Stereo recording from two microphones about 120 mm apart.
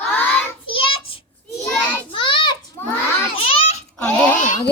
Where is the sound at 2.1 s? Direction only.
45° left (ahead or behind).